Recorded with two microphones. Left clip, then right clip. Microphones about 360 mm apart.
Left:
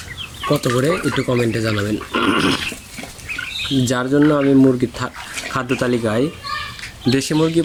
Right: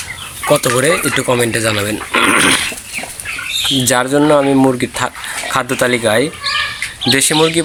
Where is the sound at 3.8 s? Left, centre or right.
Centre.